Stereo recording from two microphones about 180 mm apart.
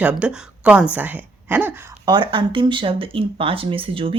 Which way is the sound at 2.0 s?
25° right (ahead or behind).